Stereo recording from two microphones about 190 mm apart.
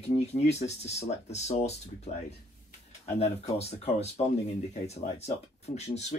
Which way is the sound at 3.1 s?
35° left (ahead or behind).